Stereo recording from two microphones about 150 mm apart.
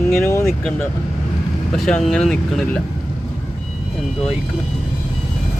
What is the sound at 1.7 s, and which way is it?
Speech, 5° left (ahead or behind).